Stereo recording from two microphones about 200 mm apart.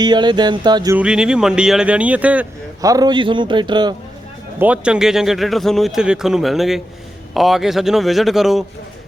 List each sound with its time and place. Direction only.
0.0 s music: 20° right (ahead or behind)
0.9 s speech: 5° right (ahead or behind); by 3.9 s 20° right (ahead or behind)
4.6 s speech: 5° right (ahead or behind)